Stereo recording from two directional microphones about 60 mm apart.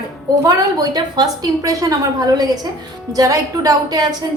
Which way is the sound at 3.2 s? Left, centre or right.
Right.